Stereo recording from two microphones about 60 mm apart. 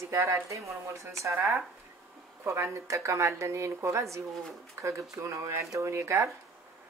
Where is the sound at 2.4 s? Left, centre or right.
Right.